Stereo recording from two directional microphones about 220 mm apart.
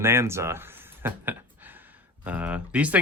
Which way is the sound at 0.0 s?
10° right (ahead or behind).